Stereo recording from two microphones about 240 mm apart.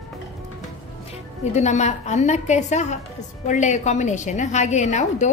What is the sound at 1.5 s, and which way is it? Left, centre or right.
A woman's voice, left.